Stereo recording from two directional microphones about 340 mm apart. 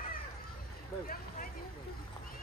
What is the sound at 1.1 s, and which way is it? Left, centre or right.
Vehicle, left.